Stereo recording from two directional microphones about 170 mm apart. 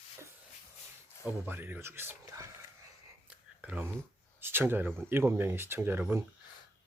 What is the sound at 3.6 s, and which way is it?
Speech, 10° right (ahead or behind).